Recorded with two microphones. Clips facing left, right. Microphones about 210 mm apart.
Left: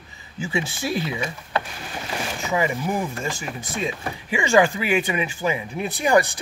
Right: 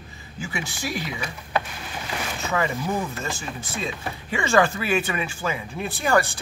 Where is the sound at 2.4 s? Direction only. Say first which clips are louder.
Left 2 dB; 10° left (ahead or behind).